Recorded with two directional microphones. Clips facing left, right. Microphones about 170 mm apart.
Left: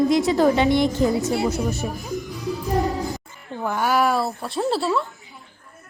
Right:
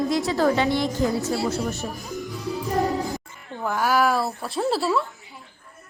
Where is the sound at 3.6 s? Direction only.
Centre (ahead or behind).